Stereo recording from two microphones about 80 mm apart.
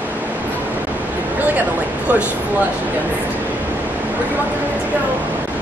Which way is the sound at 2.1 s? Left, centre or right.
Right.